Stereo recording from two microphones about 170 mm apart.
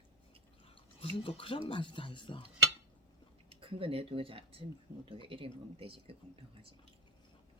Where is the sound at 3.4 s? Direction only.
35° right (ahead or behind).